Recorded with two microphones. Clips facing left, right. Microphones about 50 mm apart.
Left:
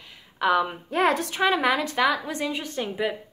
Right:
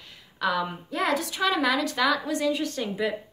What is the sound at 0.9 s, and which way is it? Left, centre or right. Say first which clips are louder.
Speech: left 4 dB; left.